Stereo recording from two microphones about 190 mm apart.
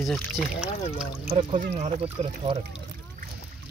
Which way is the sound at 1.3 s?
30° right (ahead or behind).